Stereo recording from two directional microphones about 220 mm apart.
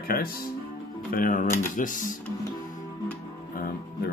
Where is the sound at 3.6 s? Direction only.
40° left (ahead or behind).